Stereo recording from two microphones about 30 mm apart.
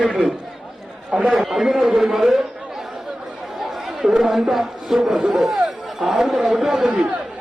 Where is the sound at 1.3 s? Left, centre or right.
Centre.